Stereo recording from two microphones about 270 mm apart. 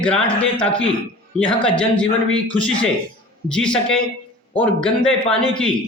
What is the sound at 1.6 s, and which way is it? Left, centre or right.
Speech, centre.